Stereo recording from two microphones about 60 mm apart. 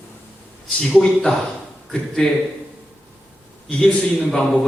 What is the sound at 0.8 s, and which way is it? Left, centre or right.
Speech, centre.